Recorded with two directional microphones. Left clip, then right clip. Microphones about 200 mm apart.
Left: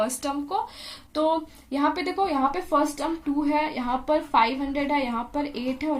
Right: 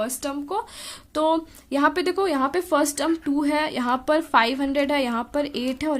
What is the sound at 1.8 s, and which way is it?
Speech, 45° right (ahead or behind).